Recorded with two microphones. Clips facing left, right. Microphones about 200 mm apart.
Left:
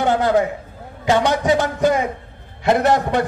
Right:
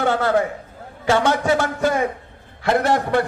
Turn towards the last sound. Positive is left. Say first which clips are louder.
# left 2 dB
turn(degrees=20)  # may be behind; listen again after turning